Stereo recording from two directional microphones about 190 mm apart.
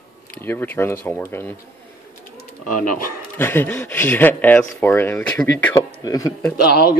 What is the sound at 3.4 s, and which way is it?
Speech, 10° left (ahead or behind).